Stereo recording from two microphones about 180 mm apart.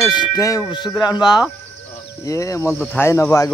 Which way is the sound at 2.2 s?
15° left (ahead or behind).